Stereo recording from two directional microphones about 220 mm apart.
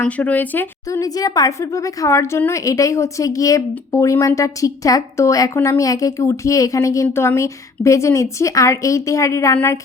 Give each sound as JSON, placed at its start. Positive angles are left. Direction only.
{"t": 0.0, "sound": "a woman's voice", "side_deg": 5}